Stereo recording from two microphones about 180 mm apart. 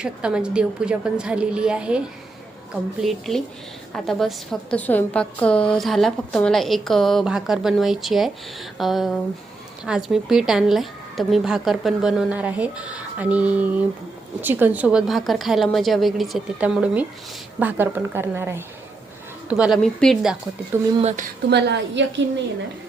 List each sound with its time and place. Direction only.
0.0 s a woman's voice: 5° right (ahead or behind)
3.0 s a woman's voice: centre (ahead or behind)
21.0 s speech: 40° right (ahead or behind)
21.5 s a woman's voice: 75° right (ahead or behind)